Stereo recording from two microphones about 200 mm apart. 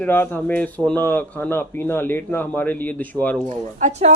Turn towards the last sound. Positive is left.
turn(degrees=-35)  # may be behind; listen again after turning